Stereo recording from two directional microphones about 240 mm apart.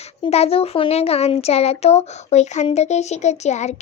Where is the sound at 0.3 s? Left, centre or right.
Left.